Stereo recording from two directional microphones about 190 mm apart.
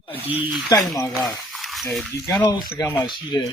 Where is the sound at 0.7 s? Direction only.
15° left (ahead or behind).